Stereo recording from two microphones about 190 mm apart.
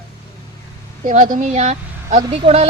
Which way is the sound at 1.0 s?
45° right (ahead or behind).